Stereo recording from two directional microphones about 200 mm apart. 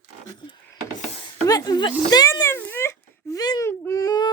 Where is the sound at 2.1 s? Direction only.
20° left (ahead or behind).